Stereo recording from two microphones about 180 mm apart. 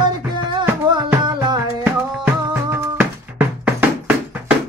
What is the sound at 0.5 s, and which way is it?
Music, 25° right (ahead or behind).